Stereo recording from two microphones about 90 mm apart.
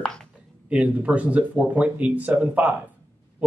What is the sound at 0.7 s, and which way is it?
Speech, 15° right (ahead or behind).